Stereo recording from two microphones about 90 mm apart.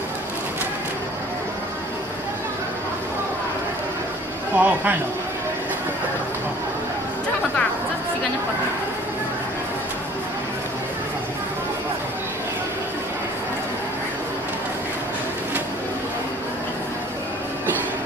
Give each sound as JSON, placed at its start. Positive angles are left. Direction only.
{"t": 4.6, "sound": "speech", "side_deg": -20}